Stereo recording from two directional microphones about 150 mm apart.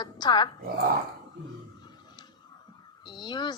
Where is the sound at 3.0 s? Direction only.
30° left (ahead or behind).